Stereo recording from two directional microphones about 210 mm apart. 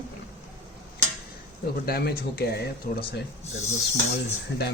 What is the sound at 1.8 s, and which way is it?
Speech, 50° left (ahead or behind).